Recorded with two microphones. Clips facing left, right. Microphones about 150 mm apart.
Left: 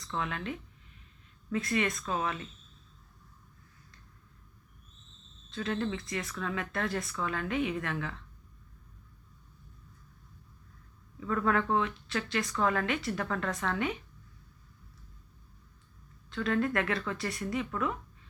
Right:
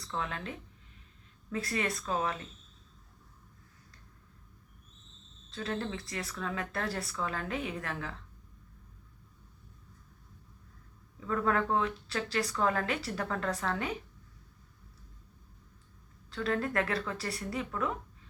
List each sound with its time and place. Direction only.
0.3 s speech: 30° right (ahead or behind)
1.5 s speech: 35° right (ahead or behind)
5.5 s speech: 35° right (ahead or behind)
11.3 s speech: 30° right (ahead or behind)
16.3 s speech: 35° right (ahead or behind)